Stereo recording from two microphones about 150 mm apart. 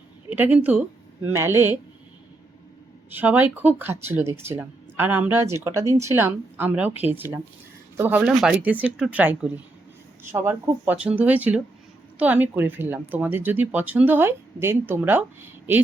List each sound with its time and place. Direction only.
0.3 s speech: 10° right (ahead or behind)
3.1 s speech: 10° right (ahead or behind)